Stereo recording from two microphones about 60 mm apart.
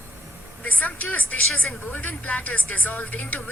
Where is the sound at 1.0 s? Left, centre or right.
Left.